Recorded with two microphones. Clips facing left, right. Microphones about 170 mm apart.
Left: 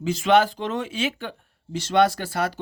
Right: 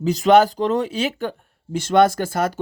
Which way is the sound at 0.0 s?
40° right (ahead or behind).